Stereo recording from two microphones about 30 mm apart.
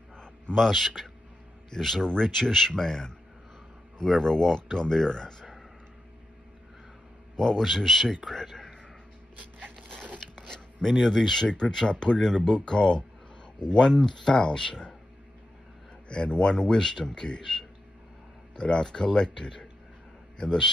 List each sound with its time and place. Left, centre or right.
0.1 s a sound: left
0.6 s speech: centre
1.7 s speech: centre
4.2 s speech: left
7.3 s a man's voice: centre
7.6 s speech: centre
9.8 s biting: left
10.2 s a sound: centre
10.9 s speech: centre
11.4 s speech: left
14.3 s speech: left
16.1 s speech: left
16.7 s speech: centre
18.6 s speech: left